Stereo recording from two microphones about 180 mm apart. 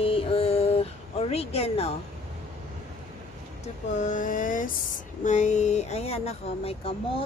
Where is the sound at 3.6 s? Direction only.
45° left (ahead or behind).